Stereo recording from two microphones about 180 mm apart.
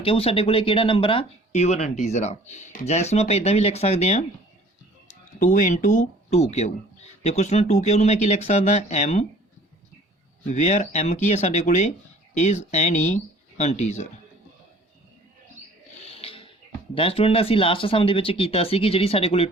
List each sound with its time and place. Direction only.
0.0 s speech: 30° left (ahead or behind)
10.5 s speech: 40° left (ahead or behind)
16.0 s a sound: 30° left (ahead or behind)
16.9 s speech: 30° left (ahead or behind)